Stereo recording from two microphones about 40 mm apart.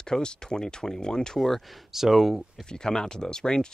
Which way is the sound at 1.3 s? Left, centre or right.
Centre.